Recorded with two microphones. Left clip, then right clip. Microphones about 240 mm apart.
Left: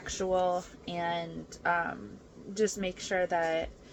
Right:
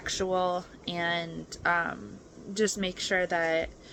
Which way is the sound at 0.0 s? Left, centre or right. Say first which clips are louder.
Right 1 dB; centre.